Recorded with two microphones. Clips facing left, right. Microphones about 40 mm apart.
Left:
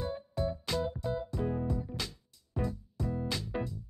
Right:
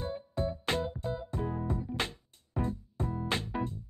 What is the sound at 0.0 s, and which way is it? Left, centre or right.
Music, right.